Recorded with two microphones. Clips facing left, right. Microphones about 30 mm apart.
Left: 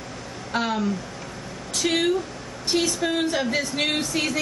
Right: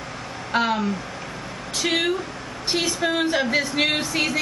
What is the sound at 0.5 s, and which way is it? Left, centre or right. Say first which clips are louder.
Speech: right 3 dB; centre.